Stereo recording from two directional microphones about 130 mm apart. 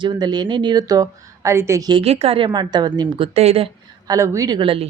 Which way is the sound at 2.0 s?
50° right (ahead or behind).